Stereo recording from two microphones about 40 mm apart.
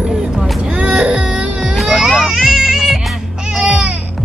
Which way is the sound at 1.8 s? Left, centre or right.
Centre.